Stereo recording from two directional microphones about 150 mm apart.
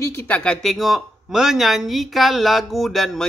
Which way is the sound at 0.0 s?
20° left (ahead or behind).